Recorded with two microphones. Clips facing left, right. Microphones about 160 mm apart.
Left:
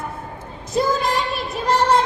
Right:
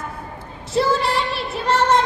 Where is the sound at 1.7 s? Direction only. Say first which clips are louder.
Even; 10° left (ahead or behind).